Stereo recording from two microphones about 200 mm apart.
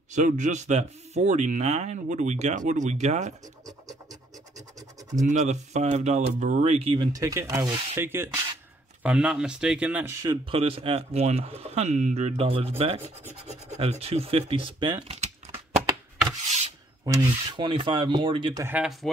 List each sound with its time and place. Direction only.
0.1 s speech: 40° right (ahead or behind)
5.2 s speech: 35° right (ahead or behind); by 10.4 s 15° right (ahead or behind)
10.5 s speech: 30° right (ahead or behind)
15.5 s a sound: 20° right (ahead or behind)
17.0 s speech: 15° right (ahead or behind)